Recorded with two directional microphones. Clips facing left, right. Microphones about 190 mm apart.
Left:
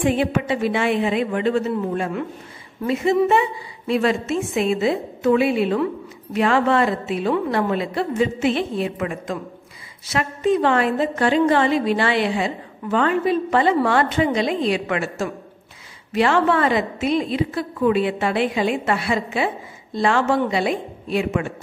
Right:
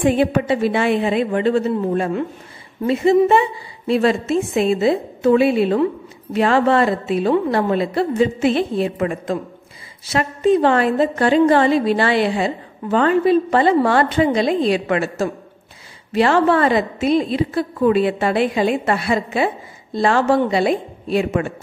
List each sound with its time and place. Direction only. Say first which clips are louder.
0.0 s a woman's voice: right 4 dB; 40° right (ahead or behind)